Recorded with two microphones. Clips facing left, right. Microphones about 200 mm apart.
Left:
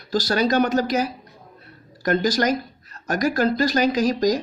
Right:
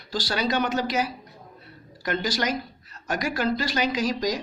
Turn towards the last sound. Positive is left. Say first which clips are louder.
# left 6 dB
turn(degrees=40)  # may be behind; listen again after turning